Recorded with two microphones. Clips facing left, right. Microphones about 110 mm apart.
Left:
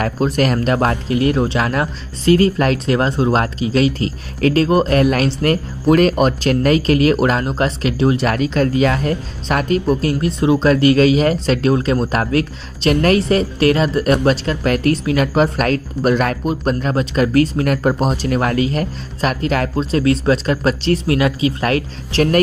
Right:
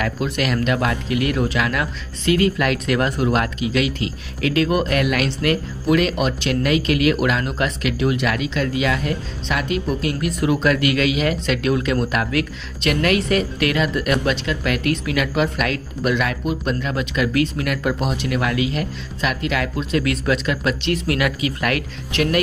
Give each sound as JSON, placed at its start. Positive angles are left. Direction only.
{"t": 0.0, "sound": "speech", "side_deg": 40}